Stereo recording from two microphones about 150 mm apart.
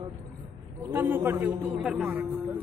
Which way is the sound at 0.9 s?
15° right (ahead or behind).